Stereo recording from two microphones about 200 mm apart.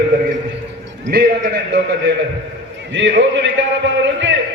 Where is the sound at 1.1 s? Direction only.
55° right (ahead or behind).